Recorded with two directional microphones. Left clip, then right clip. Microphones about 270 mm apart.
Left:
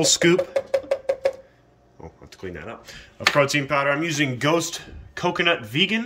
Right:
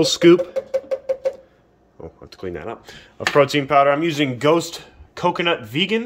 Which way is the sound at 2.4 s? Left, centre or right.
Centre.